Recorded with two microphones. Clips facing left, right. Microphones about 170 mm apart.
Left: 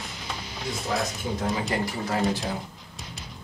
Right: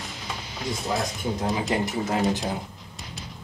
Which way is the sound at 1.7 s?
20° right (ahead or behind).